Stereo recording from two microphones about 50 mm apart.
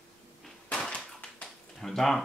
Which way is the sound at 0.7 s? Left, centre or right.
Centre.